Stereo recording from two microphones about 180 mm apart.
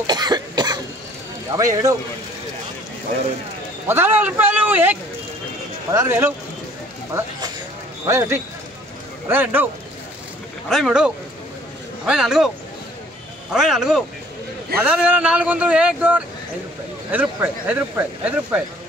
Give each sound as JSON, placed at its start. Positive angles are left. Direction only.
{"t": 0.0, "sound": "cough", "side_deg": -25}
{"t": 1.5, "sound": "a man's voice", "side_deg": -20}
{"t": 3.8, "sound": "speech", "side_deg": -10}
{"t": 5.9, "sound": "speech", "side_deg": -15}
{"t": 10.7, "sound": "speech", "side_deg": 0}
{"t": 12.1, "sound": "speech", "side_deg": -5}
{"t": 13.5, "sound": "speech", "side_deg": -5}